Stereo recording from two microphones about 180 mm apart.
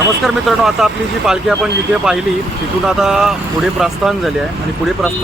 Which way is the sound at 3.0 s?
5° right (ahead or behind).